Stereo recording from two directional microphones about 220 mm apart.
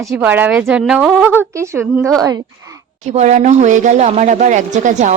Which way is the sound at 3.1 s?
30° right (ahead or behind).